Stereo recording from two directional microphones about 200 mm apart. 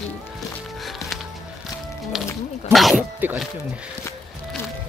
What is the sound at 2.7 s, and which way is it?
Speech, centre (ahead or behind).